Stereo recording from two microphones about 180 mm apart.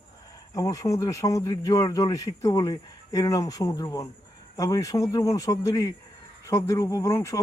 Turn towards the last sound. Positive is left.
turn(degrees=15)  # may be behind; listen again after turning